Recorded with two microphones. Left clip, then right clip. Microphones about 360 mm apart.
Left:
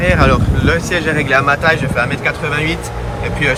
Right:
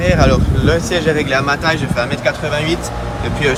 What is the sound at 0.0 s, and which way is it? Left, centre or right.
Speech, centre.